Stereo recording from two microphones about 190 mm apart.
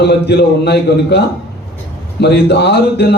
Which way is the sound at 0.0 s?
60° left (ahead or behind).